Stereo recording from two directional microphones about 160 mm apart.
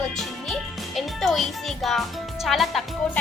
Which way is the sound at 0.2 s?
Centre (ahead or behind).